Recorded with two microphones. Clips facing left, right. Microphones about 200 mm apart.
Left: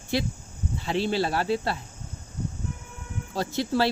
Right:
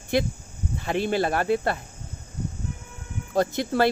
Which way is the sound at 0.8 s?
50° right (ahead or behind).